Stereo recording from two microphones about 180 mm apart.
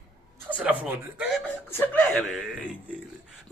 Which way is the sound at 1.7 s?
10° left (ahead or behind).